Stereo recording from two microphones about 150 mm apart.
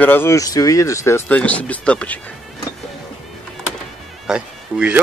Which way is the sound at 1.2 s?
10° left (ahead or behind).